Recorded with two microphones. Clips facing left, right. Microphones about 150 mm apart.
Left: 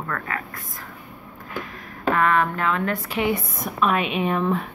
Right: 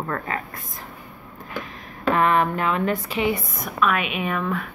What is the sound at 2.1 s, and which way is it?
Speech, 20° right (ahead or behind).